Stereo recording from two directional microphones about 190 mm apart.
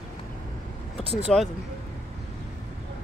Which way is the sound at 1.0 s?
30° right (ahead or behind).